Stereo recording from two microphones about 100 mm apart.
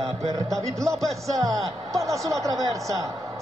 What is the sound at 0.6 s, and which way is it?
Speech, 30° right (ahead or behind).